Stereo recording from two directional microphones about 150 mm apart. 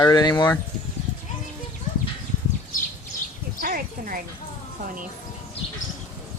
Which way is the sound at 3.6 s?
65° right (ahead or behind).